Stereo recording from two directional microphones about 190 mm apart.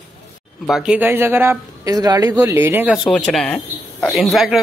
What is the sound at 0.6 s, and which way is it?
Speech, 5° right (ahead or behind).